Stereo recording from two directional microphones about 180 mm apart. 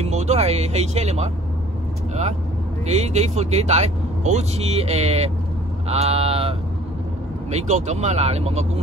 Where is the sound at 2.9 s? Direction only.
40° right (ahead or behind).